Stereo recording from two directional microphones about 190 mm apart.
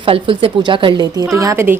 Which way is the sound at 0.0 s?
30° right (ahead or behind).